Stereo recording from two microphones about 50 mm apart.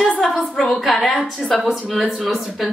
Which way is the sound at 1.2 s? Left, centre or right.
Left.